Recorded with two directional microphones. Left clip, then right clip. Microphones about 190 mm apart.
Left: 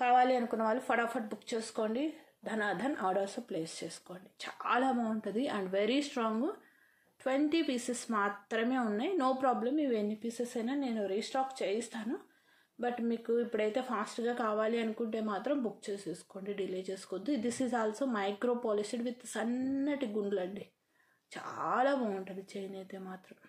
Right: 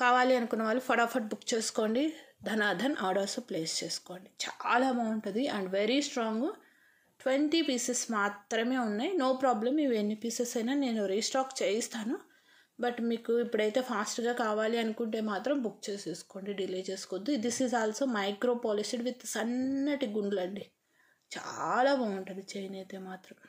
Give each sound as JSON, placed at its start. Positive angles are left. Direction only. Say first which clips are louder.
{"t": 0.0, "sound": "speech", "louder": "right 2 dB", "side_deg": -30}